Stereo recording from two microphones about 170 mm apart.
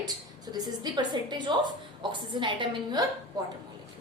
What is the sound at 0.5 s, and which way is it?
A woman's voice, 25° right (ahead or behind).